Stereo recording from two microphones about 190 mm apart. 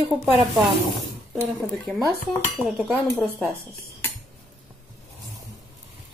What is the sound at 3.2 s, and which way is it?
Speech, centre (ahead or behind).